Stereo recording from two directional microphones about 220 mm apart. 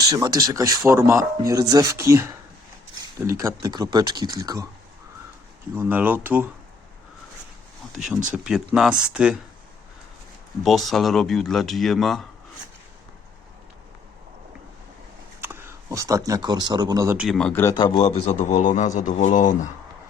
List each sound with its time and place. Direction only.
0.0 s speech: 15° right (ahead or behind)
5.7 s speech: 10° right (ahead or behind)
8.3 s speech: 5° right (ahead or behind)
10.6 s speech: centre (ahead or behind)
15.4 s speech: 10° right (ahead or behind); by 19.5 s 35° left (ahead or behind)